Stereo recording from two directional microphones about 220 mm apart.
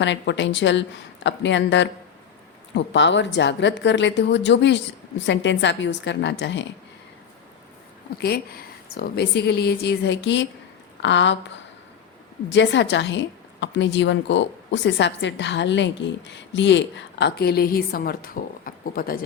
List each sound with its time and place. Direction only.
0.0 s a woman's voice: 55° left (ahead or behind)
8.2 s a woman's voice: 45° left (ahead or behind)
12.5 s a woman's voice: 55° left (ahead or behind)